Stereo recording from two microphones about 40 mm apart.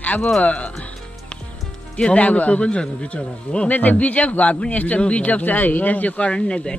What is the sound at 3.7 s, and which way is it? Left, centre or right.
A man's voice, left.